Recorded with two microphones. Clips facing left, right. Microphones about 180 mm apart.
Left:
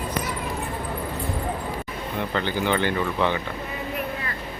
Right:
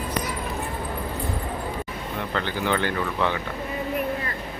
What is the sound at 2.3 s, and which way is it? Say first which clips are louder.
Speech: left 1 dB; centre (ahead or behind).